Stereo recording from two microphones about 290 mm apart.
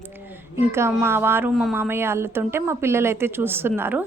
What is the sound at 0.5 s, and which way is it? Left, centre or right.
A woman's voice, centre.